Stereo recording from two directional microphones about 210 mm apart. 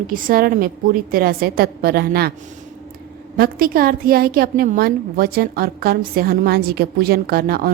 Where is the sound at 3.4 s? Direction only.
45° right (ahead or behind).